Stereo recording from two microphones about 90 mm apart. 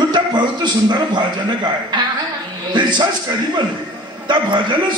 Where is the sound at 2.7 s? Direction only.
55° right (ahead or behind).